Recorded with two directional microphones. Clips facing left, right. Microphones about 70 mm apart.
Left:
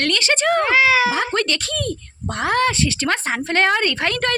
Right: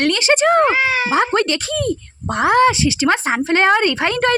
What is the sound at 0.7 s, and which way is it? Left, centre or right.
Speech, left.